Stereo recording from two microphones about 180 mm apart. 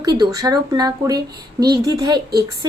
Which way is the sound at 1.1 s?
60° right (ahead or behind).